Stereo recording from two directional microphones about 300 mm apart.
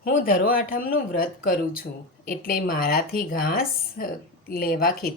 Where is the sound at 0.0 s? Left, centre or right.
Left.